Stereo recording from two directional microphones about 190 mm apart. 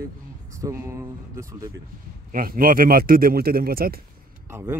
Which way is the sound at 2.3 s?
50° right (ahead or behind).